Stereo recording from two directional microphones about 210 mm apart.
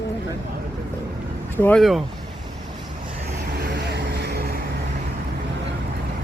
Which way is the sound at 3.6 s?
50° right (ahead or behind).